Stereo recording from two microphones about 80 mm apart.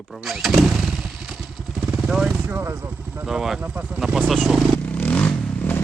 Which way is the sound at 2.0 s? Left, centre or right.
Centre.